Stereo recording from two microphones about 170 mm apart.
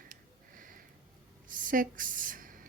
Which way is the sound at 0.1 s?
50° right (ahead or behind).